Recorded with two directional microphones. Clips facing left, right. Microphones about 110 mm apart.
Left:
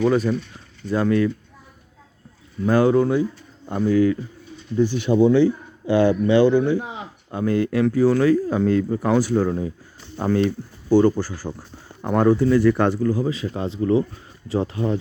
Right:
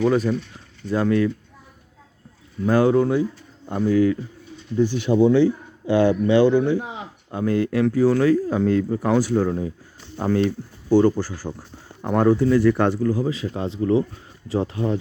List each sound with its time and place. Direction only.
0.0 s speech: centre (ahead or behind)
2.6 s speech: centre (ahead or behind)
3.7 s speech: 15° right (ahead or behind)
7.4 s speech: 5° left (ahead or behind)
12.0 s speech: 5° left (ahead or behind)
13.1 s speech: 15° right (ahead or behind)